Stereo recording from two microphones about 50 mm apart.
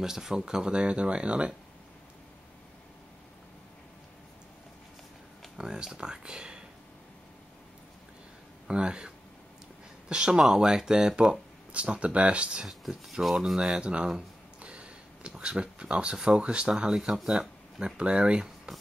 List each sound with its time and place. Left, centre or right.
0.0 s speech: centre
5.6 s speech: centre
8.6 s speech: centre
11.7 s speech: right
12.6 s speech: centre
13.7 s speech: right; by 17.4 s centre
17.4 s speech: centre